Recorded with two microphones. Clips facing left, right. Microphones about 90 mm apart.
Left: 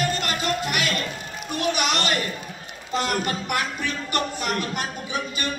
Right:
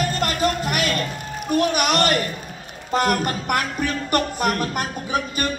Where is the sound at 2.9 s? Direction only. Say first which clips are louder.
Right 4 dB; 45° right (ahead or behind).